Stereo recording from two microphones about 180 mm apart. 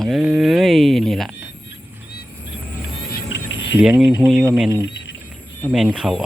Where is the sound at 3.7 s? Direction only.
5° right (ahead or behind).